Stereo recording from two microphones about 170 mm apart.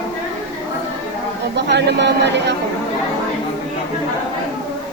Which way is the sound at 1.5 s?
90° right.